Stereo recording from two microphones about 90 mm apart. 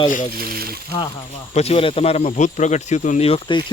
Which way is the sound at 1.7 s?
90° left.